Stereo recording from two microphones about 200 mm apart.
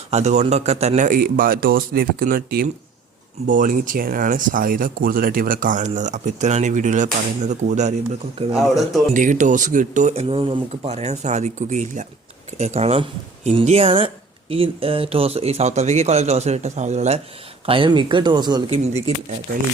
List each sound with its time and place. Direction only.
0.1 s a man's voice: 35° right (ahead or behind)
8.5 s speech: centre (ahead or behind)
9.1 s speech: 40° right (ahead or behind); by 18.6 s 20° right (ahead or behind)